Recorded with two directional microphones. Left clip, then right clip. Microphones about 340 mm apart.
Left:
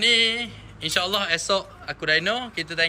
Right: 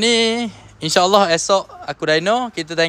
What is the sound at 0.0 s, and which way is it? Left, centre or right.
Speech, centre.